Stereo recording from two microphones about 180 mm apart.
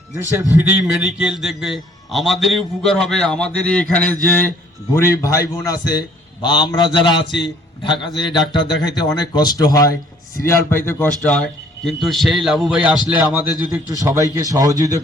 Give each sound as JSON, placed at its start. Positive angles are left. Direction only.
{"t": 0.1, "sound": "a man's voice", "side_deg": -15}